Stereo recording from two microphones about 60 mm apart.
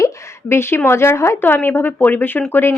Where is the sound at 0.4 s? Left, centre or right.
Left.